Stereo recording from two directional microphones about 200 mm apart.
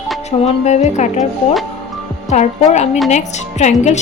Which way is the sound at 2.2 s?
35° left (ahead or behind).